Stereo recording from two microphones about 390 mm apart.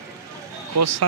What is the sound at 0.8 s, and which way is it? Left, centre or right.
Speech, right.